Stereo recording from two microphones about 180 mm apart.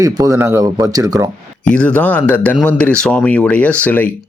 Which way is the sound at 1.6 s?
5° left (ahead or behind).